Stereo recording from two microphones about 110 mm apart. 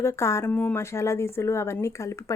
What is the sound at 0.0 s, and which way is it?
Speech, 25° left (ahead or behind).